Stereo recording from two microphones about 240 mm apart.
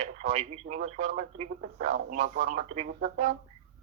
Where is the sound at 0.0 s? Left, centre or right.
Right.